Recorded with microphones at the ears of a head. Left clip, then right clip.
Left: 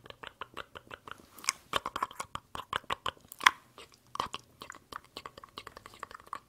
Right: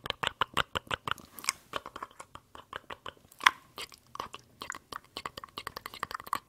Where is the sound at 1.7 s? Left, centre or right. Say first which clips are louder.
Left 6 dB; left.